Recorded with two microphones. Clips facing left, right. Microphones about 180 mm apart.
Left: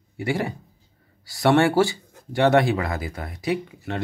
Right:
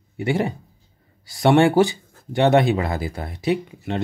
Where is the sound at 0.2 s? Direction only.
25° right (ahead or behind).